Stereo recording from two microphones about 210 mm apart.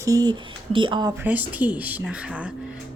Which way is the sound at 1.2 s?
10° right (ahead or behind).